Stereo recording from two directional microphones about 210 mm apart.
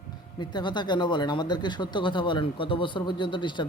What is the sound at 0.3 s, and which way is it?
Speech, 20° left (ahead or behind).